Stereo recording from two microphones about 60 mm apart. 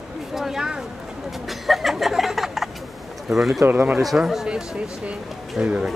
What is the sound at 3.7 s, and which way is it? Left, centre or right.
Speech, right.